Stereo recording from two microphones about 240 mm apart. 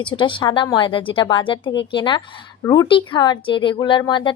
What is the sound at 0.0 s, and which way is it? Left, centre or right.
A woman's voice, centre.